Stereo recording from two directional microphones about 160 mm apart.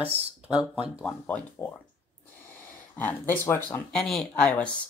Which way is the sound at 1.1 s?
10° left (ahead or behind).